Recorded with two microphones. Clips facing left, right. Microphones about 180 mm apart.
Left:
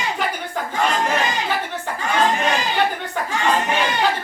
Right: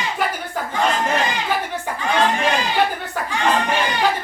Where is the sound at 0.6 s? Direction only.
5° right (ahead or behind).